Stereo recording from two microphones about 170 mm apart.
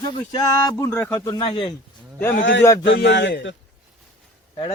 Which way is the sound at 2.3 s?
90° left.